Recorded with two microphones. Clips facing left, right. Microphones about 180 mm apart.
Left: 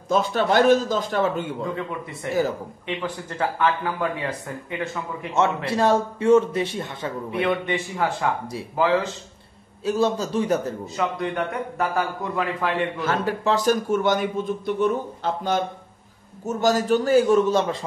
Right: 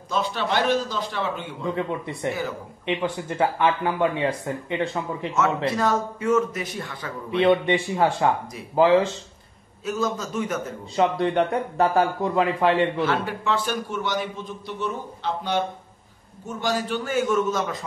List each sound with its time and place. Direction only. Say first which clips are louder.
0.1 s a man's voice: left 5 dB; 45° left (ahead or behind)
2.2 s a man's voice: left 6 dB; 20° right (ahead or behind)
5.7 s a man's voice: left 3 dB; 30° left (ahead or behind)
7.2 s a man's voice: right 6 dB; 25° right (ahead or behind)
9.8 s a man's voice: left 4 dB; 30° left (ahead or behind)
11.0 s a man's voice: right 6 dB; 30° right (ahead or behind)
13.0 s a man's voice: left 1 dB; 45° left (ahead or behind)